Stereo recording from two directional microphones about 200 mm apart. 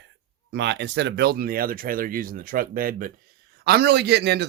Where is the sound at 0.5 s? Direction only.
60° right (ahead or behind).